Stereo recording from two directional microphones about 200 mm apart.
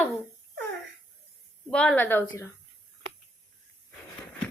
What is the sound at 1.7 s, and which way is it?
Speech, 5° left (ahead or behind).